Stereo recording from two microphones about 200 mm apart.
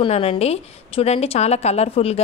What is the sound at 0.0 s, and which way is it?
A woman's voice, 30° left (ahead or behind).